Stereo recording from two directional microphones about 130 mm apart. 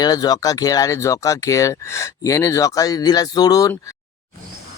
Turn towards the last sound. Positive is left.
turn(degrees=30)  # may be behind; listen again after turning